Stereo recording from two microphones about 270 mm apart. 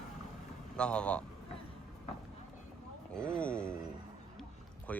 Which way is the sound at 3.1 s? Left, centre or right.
Centre.